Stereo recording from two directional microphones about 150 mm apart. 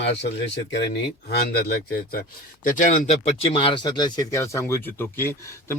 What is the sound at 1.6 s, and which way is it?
Speech, 85° left.